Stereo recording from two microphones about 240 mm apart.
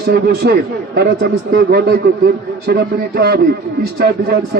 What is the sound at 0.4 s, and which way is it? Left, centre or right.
A man's voice, right.